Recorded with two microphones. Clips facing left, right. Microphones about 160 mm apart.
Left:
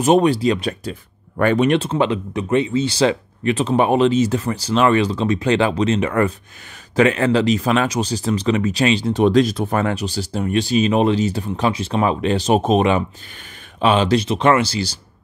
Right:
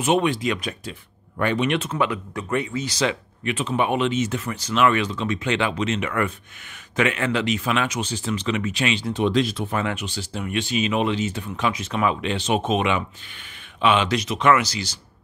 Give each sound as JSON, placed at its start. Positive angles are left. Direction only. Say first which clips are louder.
{"t": 0.0, "sound": "speech", "louder": "left 6 dB", "side_deg": 35}